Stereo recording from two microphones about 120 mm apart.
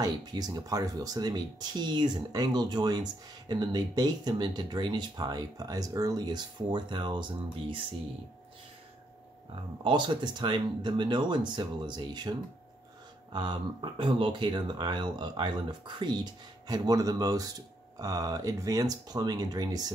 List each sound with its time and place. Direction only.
0.0 s speech: 35° right (ahead or behind)
9.8 s speech: 40° right (ahead or behind)